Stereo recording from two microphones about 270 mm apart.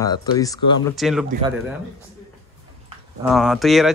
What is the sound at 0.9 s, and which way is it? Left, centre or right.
Speech, centre.